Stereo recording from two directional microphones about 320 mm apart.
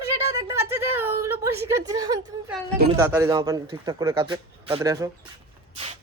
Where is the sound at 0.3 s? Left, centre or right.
Centre.